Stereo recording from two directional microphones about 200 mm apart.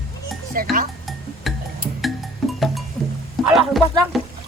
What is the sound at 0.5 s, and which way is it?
Speech, 45° right (ahead or behind).